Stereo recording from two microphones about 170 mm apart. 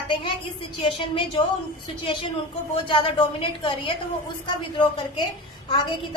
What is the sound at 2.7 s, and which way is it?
A woman's voice, 30° left (ahead or behind).